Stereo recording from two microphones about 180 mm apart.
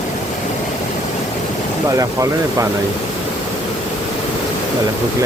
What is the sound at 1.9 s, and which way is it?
Speech, 20° right (ahead or behind).